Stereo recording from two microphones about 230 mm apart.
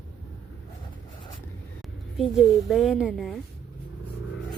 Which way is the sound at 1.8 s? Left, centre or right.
Centre.